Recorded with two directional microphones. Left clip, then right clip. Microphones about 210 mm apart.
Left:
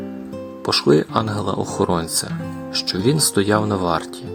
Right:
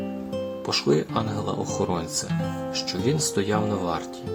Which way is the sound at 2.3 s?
Centre (ahead or behind).